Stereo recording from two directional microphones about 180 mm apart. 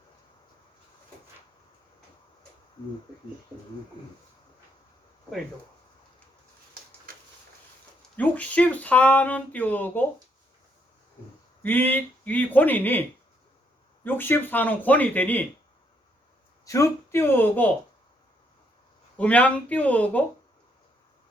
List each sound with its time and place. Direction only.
7.1 s a sound: 55° right (ahead or behind)
8.1 s speech: 10° left (ahead or behind)
11.6 s speech: 10° left (ahead or behind)
16.6 s speech: 15° left (ahead or behind)
19.1 s speech: 5° left (ahead or behind)